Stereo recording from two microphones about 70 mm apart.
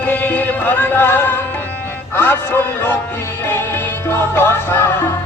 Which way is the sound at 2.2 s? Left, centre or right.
Left.